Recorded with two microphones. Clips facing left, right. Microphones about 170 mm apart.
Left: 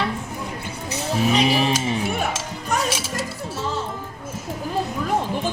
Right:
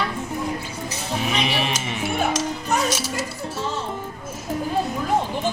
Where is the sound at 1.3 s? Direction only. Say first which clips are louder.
Left 6 dB; 35° left (ahead or behind).